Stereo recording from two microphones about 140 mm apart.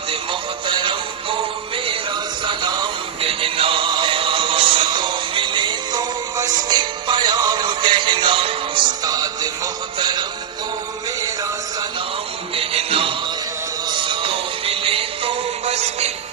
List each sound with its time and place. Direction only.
0.7 s music: 35° right (ahead or behind)
12.5 s music: 45° right (ahead or behind)